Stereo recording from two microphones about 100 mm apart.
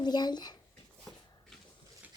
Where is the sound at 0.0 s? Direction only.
45° left (ahead or behind).